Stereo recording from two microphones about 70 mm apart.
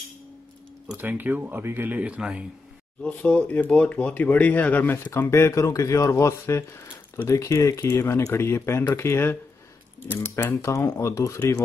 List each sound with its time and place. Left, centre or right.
0.9 s speech: right
3.3 s speech: left
5.1 s speech: left